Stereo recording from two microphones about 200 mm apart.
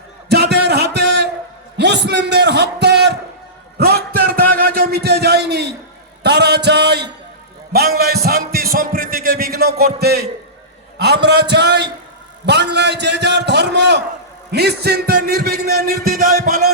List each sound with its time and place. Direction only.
0.3 s a sound: 55° right (ahead or behind)
7.7 s music: 50° right (ahead or behind)
10.9 s a man's voice: 55° right (ahead or behind)